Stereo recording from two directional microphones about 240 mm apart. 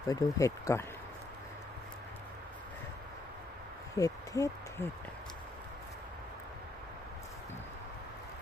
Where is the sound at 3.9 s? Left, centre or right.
Centre.